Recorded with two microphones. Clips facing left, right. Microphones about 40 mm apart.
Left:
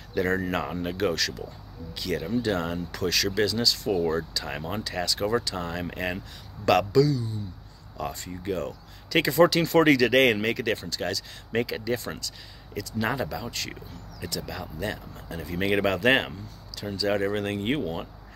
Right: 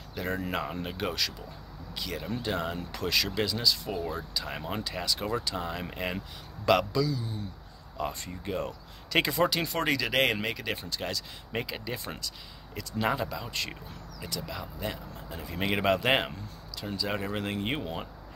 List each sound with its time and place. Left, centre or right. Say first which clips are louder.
0.2 s speech: left 6 dB; centre
2.9 s speech: left 2 dB; right
4.5 s speech: left 3 dB; centre
4.7 s speech: left 4 dB; centre
6.6 s speech: left 5 dB; centre
8.3 s speech: left 5 dB; centre
8.5 s speech: left 2 dB; right
9.4 s speech: left 8 dB; centre
10.8 s speech: left 4 dB; centre
11.5 s speech: left 7 dB; centre
12.0 s speech: left 3 dB; centre
13.5 s speech: even; right
14.2 s speech: left 3 dB; centre